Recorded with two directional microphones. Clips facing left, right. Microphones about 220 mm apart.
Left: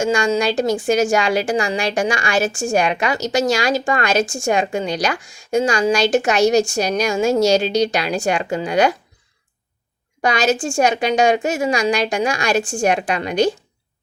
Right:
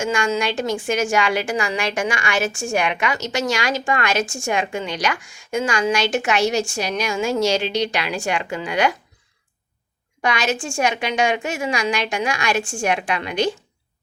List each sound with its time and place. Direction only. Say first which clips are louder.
0.0 s a woman's voice: left 4 dB; 35° left (ahead or behind)
10.2 s a woman's voice: left 4 dB; 40° left (ahead or behind)